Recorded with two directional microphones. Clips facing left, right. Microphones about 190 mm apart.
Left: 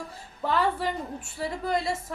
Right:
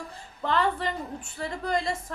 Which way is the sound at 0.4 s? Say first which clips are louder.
Even; 5° left (ahead or behind).